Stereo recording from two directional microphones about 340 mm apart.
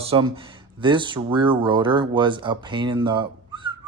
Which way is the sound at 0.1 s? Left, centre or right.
Centre.